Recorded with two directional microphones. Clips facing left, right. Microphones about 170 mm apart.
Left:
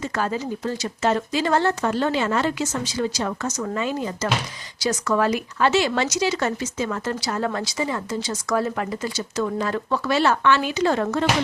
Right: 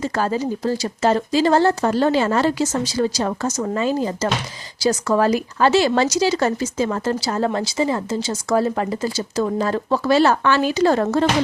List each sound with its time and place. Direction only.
0.0 s speech: 35° right (ahead or behind)